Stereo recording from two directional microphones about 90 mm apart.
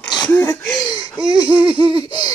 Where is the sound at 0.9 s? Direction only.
50° left (ahead or behind).